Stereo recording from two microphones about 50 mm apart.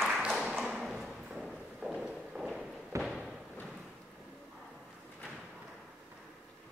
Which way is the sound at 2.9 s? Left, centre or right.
Right.